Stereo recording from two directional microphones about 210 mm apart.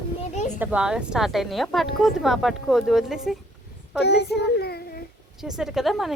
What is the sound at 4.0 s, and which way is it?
A child's voice, 50° left (ahead or behind).